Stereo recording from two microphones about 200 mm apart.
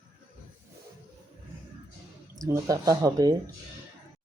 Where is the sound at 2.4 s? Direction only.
15° right (ahead or behind).